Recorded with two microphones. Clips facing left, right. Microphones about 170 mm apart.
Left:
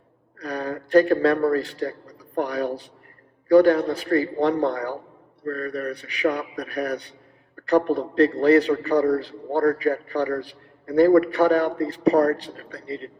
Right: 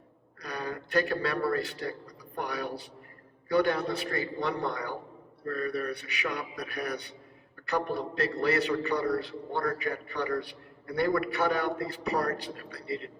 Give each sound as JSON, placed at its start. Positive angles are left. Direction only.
{"t": 0.4, "sound": "a man's voice", "side_deg": 35}